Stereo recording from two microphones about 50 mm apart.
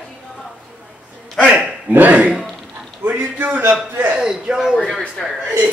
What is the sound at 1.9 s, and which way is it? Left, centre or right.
A man's voice, right.